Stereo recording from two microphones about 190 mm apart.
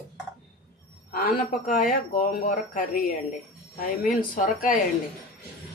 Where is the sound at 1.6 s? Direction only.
45° left (ahead or behind).